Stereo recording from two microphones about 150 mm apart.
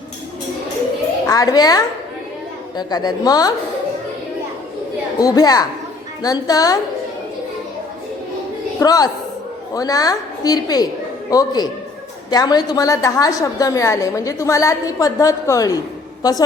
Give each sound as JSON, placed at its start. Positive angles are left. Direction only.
{"t": 1.3, "sound": "a woman's voice", "side_deg": 25}
{"t": 5.2, "sound": "a woman's voice", "side_deg": 25}
{"t": 8.8, "sound": "a woman's voice", "side_deg": 25}